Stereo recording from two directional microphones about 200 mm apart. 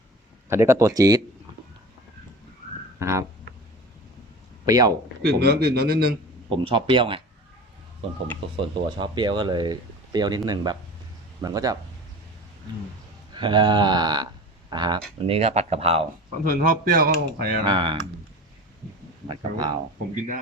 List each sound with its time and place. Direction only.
0.4 s speech: 15° right (ahead or behind)
3.0 s speech: 15° right (ahead or behind)
4.6 s speech: 20° right (ahead or behind)
5.2 s speech: 55° right (ahead or behind)
6.5 s speech: 25° right (ahead or behind)
8.5 s a man's voice: 25° right (ahead or behind)
13.3 s speech: 25° right (ahead or behind)
15.3 s speech: 30° right (ahead or behind)
16.4 s speech: 45° right (ahead or behind)
17.7 s speech: 25° right (ahead or behind)
19.3 s speech: 20° right (ahead or behind)